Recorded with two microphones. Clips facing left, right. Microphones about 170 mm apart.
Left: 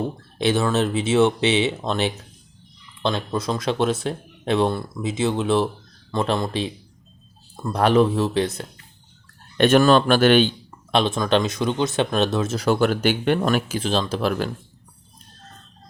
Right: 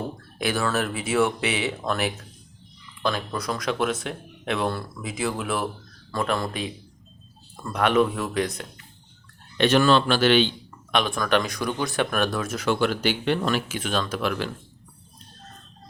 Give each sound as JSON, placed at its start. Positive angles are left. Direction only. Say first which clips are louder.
{"t": 0.3, "sound": "speech", "louder": "left 5 dB", "side_deg": 25}
{"t": 7.7, "sound": "speech", "louder": "left 4 dB", "side_deg": 35}
{"t": 9.6, "sound": "speech", "louder": "left 4 dB", "side_deg": 50}
{"t": 10.9, "sound": "speech", "louder": "left 3 dB", "side_deg": 25}
{"t": 12.6, "sound": "speech", "louder": "left 3 dB", "side_deg": 45}
{"t": 13.7, "sound": "speech", "louder": "left 4 dB", "side_deg": 30}